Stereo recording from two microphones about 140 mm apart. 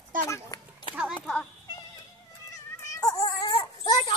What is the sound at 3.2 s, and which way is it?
Dog, 30° left (ahead or behind).